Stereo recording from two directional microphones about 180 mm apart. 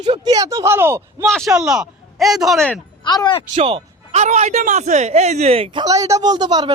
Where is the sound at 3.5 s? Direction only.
30° right (ahead or behind).